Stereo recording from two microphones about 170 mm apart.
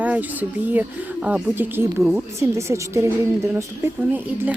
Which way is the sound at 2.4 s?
15° right (ahead or behind).